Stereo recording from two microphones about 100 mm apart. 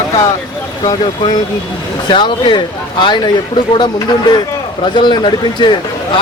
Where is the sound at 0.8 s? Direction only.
45° left (ahead or behind).